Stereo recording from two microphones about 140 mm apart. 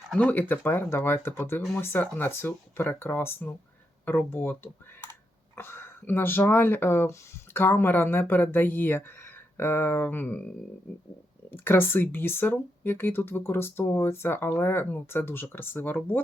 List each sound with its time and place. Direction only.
0.1 s speech: 10° left (ahead or behind)
11.5 s speech: 15° left (ahead or behind)